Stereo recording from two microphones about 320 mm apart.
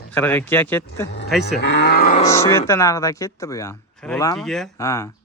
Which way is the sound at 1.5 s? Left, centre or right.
Left.